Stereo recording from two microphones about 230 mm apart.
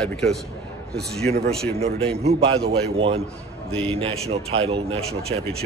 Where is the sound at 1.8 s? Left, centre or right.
Right.